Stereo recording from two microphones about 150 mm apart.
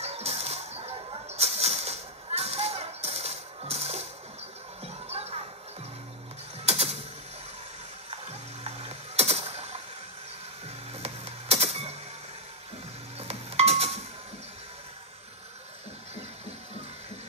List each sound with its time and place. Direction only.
0.0 s a sound: 45° right (ahead or behind)
4.8 s music: 45° right (ahead or behind)
6.6 s mechanisms: 45° right (ahead or behind)
8.1 s mechanisms: 45° right (ahead or behind)
11.0 s music: 45° right (ahead or behind)
13.2 s music: 45° right (ahead or behind)